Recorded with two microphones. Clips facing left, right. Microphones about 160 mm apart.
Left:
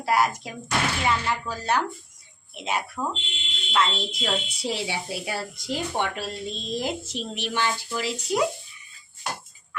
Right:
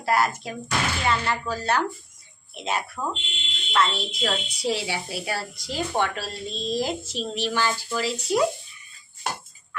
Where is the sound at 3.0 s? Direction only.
15° left (ahead or behind).